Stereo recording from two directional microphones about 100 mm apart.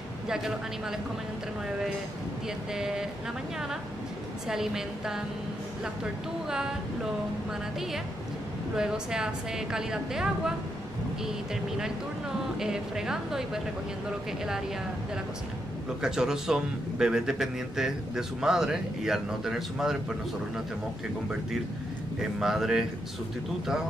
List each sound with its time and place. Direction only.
0.3 s a man's voice: 5° right (ahead or behind)
2.7 s a man's voice: 5° right (ahead or behind)
4.5 s a man's voice: 5° right (ahead or behind)
8.7 s a woman's voice: 5° right (ahead or behind)
12.5 s a man's voice: 5° right (ahead or behind)
16.0 s a man's voice: 5° right (ahead or behind)
22.4 s a man's voice: 5° right (ahead or behind)